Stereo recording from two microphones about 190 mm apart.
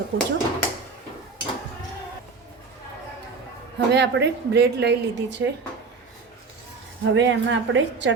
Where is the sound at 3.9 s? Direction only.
60° right (ahead or behind).